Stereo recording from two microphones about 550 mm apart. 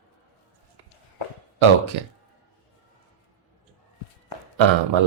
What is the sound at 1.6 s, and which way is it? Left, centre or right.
Speech, right.